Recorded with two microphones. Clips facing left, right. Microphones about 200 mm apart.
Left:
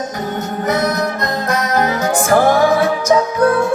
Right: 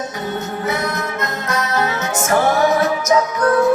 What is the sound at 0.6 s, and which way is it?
Music, 40° left (ahead or behind).